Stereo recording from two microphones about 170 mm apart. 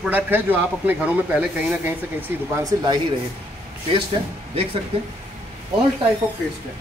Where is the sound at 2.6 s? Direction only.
25° right (ahead or behind).